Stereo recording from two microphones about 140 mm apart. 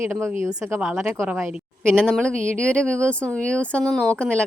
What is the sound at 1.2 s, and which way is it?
Speech, 15° right (ahead or behind).